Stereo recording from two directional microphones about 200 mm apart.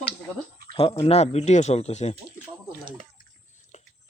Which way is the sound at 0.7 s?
30° left (ahead or behind).